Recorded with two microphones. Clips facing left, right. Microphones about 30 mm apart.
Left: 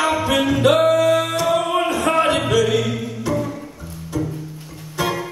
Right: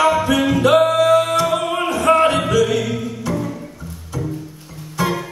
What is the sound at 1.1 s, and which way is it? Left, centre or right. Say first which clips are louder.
Music: right 4 dB; centre.